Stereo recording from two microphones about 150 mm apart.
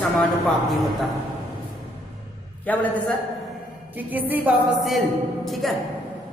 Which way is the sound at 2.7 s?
10° left (ahead or behind).